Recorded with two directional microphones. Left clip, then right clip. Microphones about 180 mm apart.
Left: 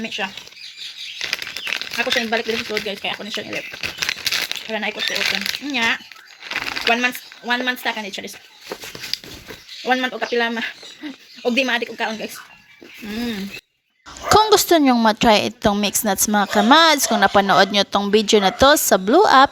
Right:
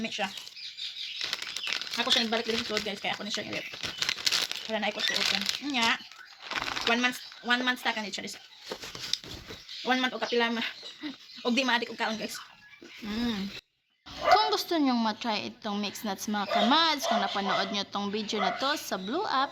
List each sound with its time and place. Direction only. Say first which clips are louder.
0.0 s speech: left 7 dB; 15° right (ahead or behind)
1.2 s bird flight: left 9 dB; 5° right (ahead or behind)
2.5 s speech: left 8 dB; 10° right (ahead or behind)
3.7 s crumpling: left 7 dB; 5° right (ahead or behind)
4.7 s speech: left 6 dB; 15° right (ahead or behind)
4.9 s speech: left 8 dB; centre (ahead or behind)
5.6 s speech: left 8 dB; 15° right (ahead or behind)
9.1 s a sound: left 5 dB; 15° right (ahead or behind)
9.8 s speech: left 8 dB; 15° right (ahead or behind)
14.5 s speech: left 14 dB; 50° left (ahead or behind)